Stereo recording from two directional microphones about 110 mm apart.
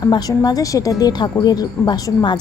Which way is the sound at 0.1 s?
35° left (ahead or behind).